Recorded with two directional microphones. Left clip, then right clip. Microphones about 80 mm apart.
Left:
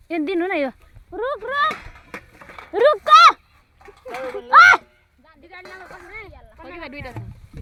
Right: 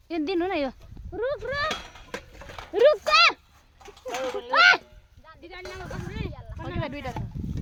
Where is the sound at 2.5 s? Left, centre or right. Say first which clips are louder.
Left 2 dB; left.